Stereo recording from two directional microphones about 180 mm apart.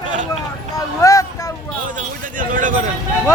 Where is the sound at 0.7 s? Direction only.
20° left (ahead or behind).